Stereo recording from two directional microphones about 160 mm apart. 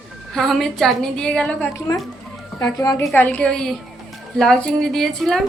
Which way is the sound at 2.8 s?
25° left (ahead or behind).